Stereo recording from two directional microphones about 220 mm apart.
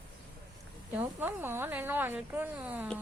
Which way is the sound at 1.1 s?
10° right (ahead or behind).